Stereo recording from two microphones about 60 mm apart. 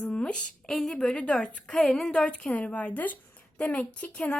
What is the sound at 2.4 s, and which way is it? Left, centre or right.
Speech, left.